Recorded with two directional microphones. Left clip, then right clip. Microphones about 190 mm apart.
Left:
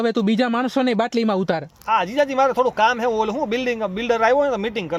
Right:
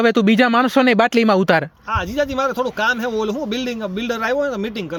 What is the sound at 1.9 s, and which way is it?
Speech, 35° right (ahead or behind).